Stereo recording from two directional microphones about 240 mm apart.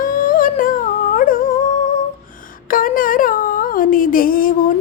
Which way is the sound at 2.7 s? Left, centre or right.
Left.